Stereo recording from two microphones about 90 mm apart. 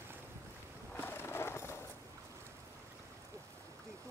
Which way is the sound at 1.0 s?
25° left (ahead or behind).